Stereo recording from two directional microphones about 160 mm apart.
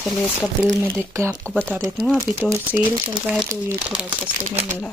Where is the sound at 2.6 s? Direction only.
30° right (ahead or behind).